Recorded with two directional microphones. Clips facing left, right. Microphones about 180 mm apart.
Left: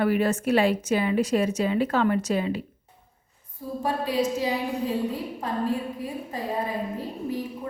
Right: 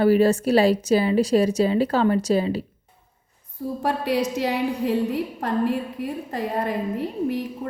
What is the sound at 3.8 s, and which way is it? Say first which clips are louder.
A woman's voice: right 2 dB; 70° right (ahead or behind).